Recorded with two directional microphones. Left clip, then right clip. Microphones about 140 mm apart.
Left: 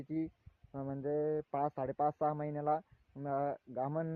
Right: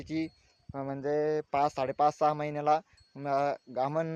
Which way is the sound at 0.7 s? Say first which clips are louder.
Right 6 dB; 25° right (ahead or behind).